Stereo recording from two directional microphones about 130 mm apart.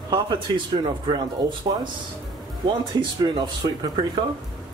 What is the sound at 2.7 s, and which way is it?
Speech, 35° right (ahead or behind).